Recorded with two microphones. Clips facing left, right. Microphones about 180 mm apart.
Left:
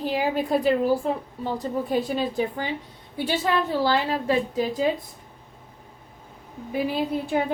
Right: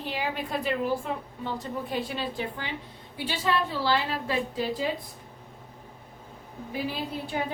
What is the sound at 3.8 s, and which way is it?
Speech, 45° left (ahead or behind).